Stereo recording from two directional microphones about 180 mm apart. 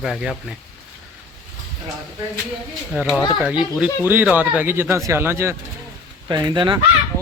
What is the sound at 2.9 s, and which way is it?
Speech, 5° right (ahead or behind).